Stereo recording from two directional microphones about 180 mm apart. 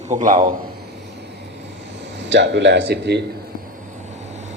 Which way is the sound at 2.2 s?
75° right (ahead or behind).